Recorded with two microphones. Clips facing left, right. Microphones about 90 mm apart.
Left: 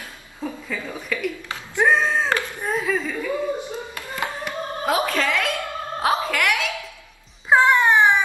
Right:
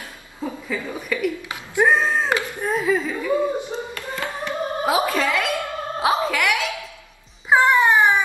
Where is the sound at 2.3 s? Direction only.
15° right (ahead or behind).